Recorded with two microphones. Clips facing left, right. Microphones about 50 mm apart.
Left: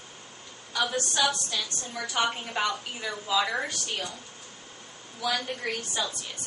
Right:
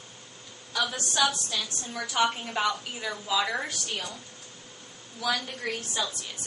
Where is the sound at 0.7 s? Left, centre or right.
Centre.